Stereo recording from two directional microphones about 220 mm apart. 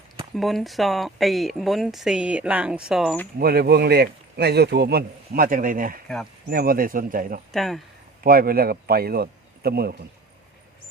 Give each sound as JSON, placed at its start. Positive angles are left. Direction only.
{"t": 0.3, "sound": "speech", "side_deg": 0}
{"t": 3.3, "sound": "a man's voice", "side_deg": -45}
{"t": 7.5, "sound": "speech", "side_deg": 0}
{"t": 8.2, "sound": "a man's voice", "side_deg": -40}